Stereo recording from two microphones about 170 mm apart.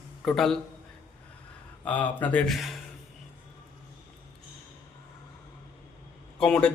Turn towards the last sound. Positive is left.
turn(degrees=5)  # may be behind; listen again after turning